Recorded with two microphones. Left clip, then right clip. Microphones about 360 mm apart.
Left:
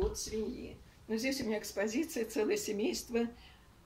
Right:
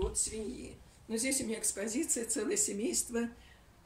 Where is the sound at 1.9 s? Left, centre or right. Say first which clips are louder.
Even; left.